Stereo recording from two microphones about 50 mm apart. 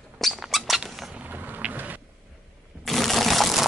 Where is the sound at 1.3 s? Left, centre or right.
Right.